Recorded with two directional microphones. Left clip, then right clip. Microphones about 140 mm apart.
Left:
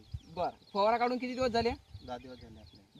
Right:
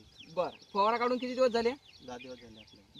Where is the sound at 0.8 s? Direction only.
45° left (ahead or behind).